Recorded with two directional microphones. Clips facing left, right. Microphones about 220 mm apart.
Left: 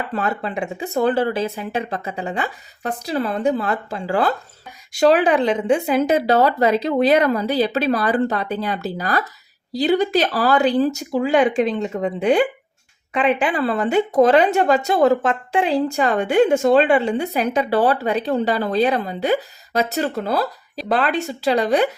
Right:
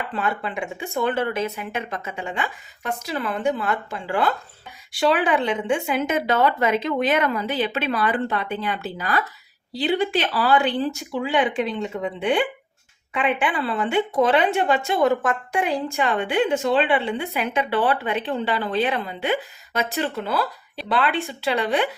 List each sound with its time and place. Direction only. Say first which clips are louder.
0.1 s a woman's voice: left 3 dB; 40° left (ahead or behind)